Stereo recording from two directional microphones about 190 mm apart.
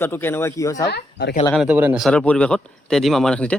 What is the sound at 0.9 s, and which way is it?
Speech, 60° left (ahead or behind).